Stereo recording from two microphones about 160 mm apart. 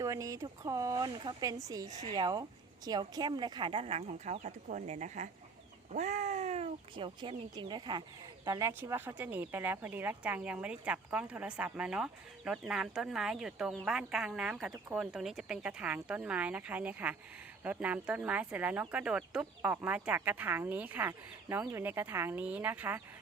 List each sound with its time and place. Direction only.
0.0 s a woman's voice: 20° right (ahead or behind)